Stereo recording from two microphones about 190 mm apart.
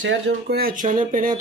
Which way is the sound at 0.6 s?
45° right (ahead or behind).